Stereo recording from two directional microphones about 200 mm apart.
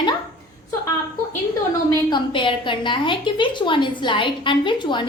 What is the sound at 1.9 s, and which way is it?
A woman's voice, 25° left (ahead or behind).